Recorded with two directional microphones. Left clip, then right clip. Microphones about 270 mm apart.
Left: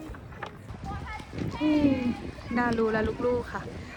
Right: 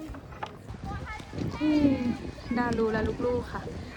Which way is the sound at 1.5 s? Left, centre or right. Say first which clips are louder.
Even; left.